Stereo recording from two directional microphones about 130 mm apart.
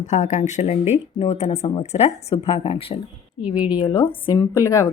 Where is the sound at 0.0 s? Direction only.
70° left (ahead or behind); by 3.0 s 45° left (ahead or behind).